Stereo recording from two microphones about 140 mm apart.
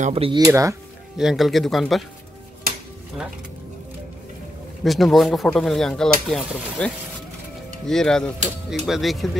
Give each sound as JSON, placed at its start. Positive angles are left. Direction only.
{"t": 0.0, "sound": "speech", "side_deg": -45}
{"t": 0.5, "sound": "speech", "side_deg": -20}
{"t": 1.1, "sound": "speech", "side_deg": 0}
{"t": 4.8, "sound": "speech", "side_deg": 0}
{"t": 7.9, "sound": "speech", "side_deg": 5}